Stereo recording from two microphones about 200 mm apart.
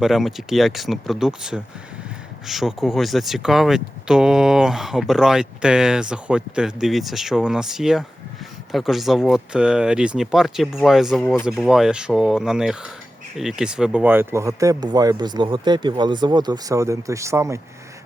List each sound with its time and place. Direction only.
0.0 s speech: centre (ahead or behind)